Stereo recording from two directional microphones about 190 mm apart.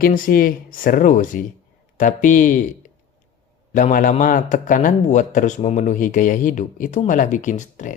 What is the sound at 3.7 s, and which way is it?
A man's voice, 45° left (ahead or behind).